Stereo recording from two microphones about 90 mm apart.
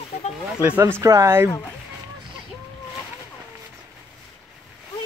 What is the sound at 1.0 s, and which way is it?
Speech, 35° right (ahead or behind).